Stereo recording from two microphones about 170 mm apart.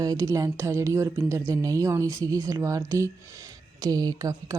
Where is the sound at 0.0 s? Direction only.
20° right (ahead or behind).